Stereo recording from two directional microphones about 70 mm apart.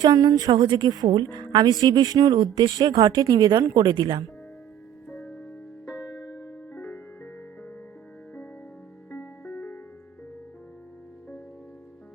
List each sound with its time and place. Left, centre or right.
0.0 s speech: right
1.8 s speech: right
2.1 s speech: right
5.9 s music: left
6.7 s music: left
9.0 s music: left
9.6 s music: left